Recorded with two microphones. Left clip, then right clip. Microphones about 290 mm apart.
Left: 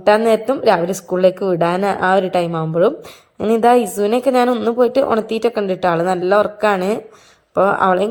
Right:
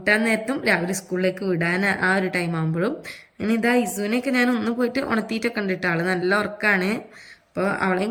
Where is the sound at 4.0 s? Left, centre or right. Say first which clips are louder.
Left 9 dB; centre.